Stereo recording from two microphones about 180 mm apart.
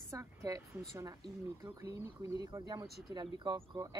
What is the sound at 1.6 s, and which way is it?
Speech, 15° right (ahead or behind).